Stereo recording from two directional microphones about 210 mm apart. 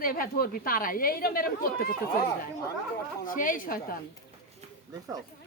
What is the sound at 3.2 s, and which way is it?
Speech, 40° left (ahead or behind).